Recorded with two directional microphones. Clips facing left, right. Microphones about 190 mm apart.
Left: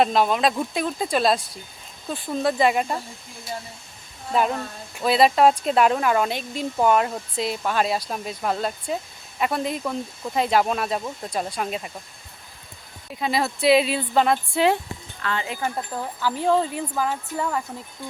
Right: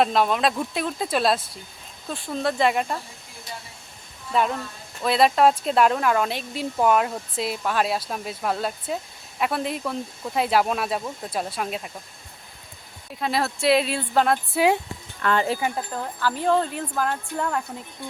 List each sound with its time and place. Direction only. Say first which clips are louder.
0.0 s speech: left 1 dB; centre (ahead or behind)
4.9 s speech: left 1 dB; centre (ahead or behind)
13.1 s speech: left 1 dB; centre (ahead or behind)
15.2 s speech: right 6 dB; 50° right (ahead or behind)
15.7 s speech: even; 5° left (ahead or behind)